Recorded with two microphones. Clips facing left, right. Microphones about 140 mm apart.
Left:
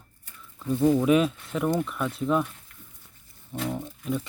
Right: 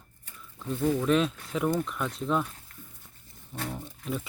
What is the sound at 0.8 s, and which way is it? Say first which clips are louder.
Speech: left 5 dB; 25° left (ahead or behind).